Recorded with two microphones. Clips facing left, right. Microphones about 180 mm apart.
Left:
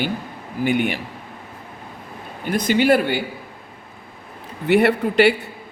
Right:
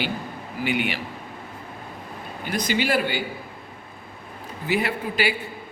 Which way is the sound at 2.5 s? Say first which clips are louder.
Left 7 dB; 50° left (ahead or behind).